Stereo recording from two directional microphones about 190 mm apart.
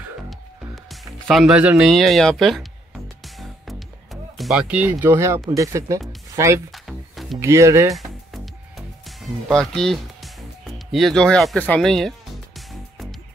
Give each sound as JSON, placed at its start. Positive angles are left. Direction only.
{"t": 1.3, "sound": "speech", "side_deg": 0}
{"t": 3.3, "sound": "music", "side_deg": 0}
{"t": 5.5, "sound": "speech", "side_deg": -15}
{"t": 6.7, "sound": "music", "side_deg": 0}
{"t": 7.3, "sound": "speech", "side_deg": -15}
{"t": 7.9, "sound": "music", "side_deg": 0}
{"t": 10.9, "sound": "speech", "side_deg": 0}